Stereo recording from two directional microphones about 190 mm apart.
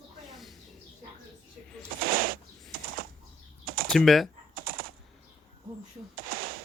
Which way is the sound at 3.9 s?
Centre (ahead or behind).